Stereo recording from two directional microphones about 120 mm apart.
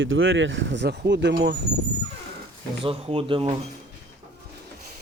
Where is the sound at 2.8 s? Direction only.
50° right (ahead or behind).